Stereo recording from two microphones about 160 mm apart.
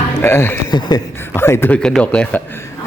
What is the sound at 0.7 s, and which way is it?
Speech, 25° left (ahead or behind).